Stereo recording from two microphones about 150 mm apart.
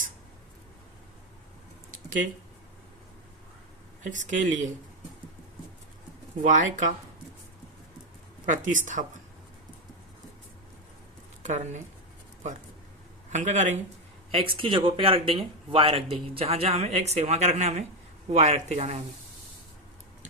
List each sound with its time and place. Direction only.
4.0 s speech: 55° right (ahead or behind)
6.5 s speech: 55° right (ahead or behind)
8.4 s speech: 55° right (ahead or behind)
11.4 s speech: 55° right (ahead or behind)
13.3 s speech: 50° right (ahead or behind)
14.3 s speech: 35° right (ahead or behind)